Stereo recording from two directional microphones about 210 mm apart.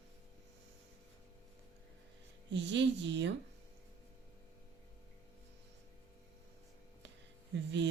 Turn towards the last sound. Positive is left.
turn(degrees=-60)  # may be behind; listen again after turning